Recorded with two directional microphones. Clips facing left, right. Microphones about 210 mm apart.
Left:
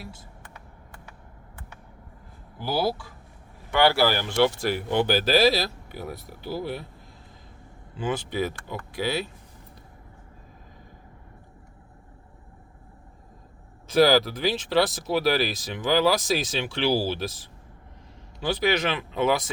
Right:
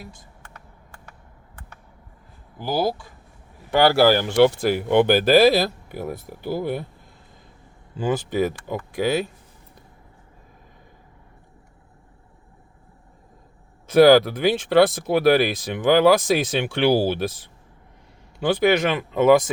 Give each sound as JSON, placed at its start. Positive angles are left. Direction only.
{"t": 2.6, "sound": "speech", "side_deg": -15}
{"t": 3.7, "sound": "speech", "side_deg": -40}
{"t": 7.9, "sound": "speech", "side_deg": -45}
{"t": 13.8, "sound": "speech", "side_deg": -55}